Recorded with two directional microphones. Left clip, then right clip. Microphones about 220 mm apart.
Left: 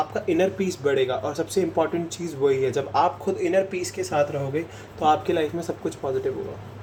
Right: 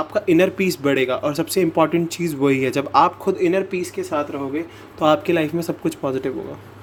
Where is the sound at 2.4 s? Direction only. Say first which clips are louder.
Right 2 dB; 45° right (ahead or behind).